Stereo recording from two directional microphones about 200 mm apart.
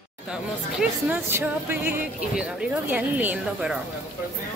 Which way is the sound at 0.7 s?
10° right (ahead or behind).